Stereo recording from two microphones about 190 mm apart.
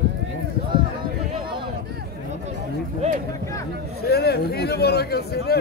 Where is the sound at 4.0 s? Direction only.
55° left (ahead or behind).